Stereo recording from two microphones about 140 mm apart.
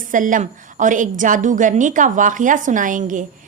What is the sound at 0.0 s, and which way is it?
A woman's voice, 70° right (ahead or behind).